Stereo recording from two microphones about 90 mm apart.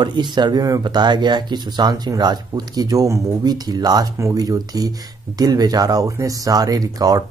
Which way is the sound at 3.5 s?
50° right (ahead or behind).